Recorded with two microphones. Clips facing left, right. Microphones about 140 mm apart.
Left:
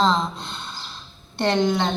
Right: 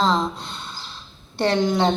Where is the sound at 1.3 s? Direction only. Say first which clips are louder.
Even; 5° right (ahead or behind).